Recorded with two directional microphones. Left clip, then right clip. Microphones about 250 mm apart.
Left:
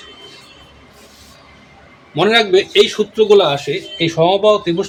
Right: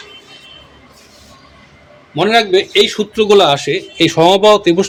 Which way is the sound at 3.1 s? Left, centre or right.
Right.